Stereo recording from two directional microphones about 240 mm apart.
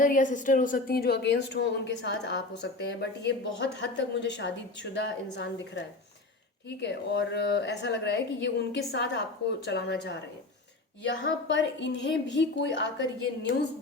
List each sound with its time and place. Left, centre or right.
0.0 s a woman's voice: left